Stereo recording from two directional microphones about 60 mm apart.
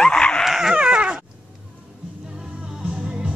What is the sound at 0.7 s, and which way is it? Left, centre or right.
Dog, centre.